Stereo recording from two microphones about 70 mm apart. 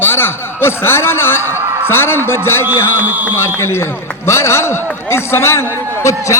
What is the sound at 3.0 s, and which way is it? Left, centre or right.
Speech, right.